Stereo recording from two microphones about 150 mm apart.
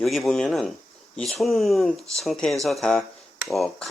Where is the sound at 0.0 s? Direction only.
Centre (ahead or behind).